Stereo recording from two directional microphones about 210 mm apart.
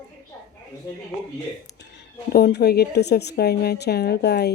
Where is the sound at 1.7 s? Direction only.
55° left (ahead or behind).